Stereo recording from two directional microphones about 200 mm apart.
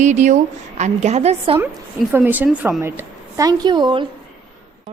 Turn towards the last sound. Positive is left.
turn(degrees=-20)  # may be behind; listen again after turning